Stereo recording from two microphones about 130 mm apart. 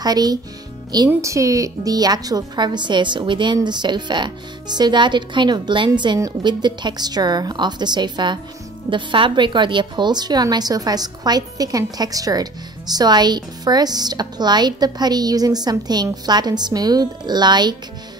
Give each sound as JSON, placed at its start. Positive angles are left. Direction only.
{"t": 0.0, "sound": "a woman's voice", "side_deg": -30}